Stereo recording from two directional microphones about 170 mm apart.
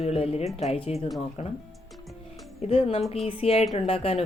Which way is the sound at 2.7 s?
35° left (ahead or behind).